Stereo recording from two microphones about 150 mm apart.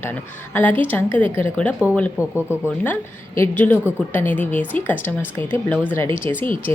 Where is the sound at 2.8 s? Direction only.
15° left (ahead or behind).